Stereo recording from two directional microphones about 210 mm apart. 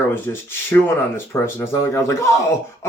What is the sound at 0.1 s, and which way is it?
Speech, 10° left (ahead or behind).